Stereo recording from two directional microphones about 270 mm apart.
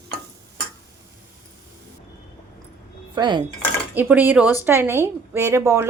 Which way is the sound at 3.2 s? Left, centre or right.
Centre.